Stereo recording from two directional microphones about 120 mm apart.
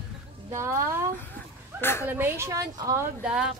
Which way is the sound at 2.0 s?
15° right (ahead or behind).